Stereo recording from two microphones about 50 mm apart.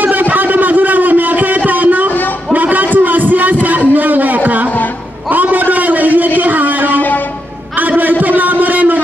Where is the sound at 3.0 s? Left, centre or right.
Right.